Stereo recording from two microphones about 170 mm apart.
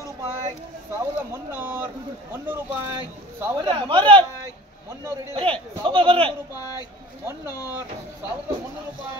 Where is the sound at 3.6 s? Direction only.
30° right (ahead or behind).